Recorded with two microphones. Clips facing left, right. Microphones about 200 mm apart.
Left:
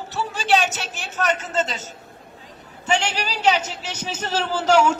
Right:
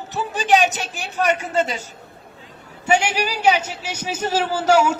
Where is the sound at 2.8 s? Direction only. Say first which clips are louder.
Right 4 dB; 10° right (ahead or behind).